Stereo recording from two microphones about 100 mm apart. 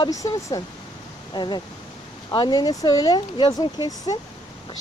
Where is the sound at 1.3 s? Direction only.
45° left (ahead or behind).